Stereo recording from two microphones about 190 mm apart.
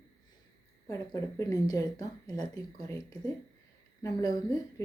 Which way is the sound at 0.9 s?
15° left (ahead or behind).